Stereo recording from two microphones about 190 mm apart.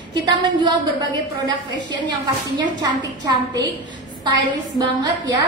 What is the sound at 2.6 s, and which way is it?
Speech, 20° right (ahead or behind).